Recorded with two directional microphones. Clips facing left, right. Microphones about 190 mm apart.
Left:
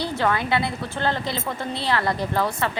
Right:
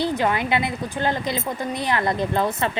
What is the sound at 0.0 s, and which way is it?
A woman's voice, 15° right (ahead or behind).